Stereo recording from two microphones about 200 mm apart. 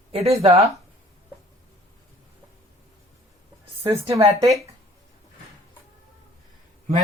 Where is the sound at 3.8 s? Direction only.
30° right (ahead or behind).